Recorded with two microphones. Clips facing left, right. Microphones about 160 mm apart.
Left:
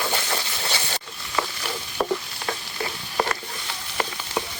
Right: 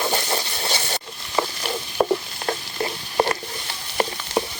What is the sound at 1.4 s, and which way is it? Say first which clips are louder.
Stir: right 4 dB; 25° right (ahead or behind).